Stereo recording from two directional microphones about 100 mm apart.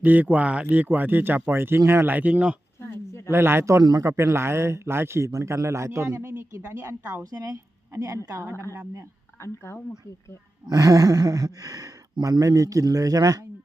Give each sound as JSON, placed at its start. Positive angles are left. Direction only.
{"t": 0.0, "sound": "a man's voice", "side_deg": -15}
{"t": 3.2, "sound": "a man's voice", "side_deg": -25}
{"t": 9.4, "sound": "speech", "side_deg": 30}
{"t": 10.7, "sound": "speech", "side_deg": -35}